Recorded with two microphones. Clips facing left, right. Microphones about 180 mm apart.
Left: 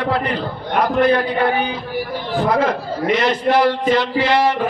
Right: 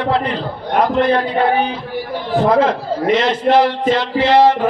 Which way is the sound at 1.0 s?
25° right (ahead or behind).